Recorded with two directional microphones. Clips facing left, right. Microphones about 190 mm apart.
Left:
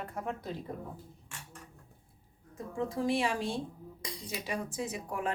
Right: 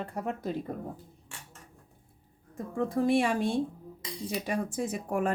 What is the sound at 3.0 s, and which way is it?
A woman's voice, 55° right (ahead or behind).